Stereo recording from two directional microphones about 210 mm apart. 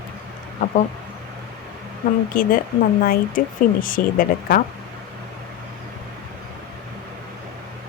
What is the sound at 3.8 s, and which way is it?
Speech, 40° left (ahead or behind).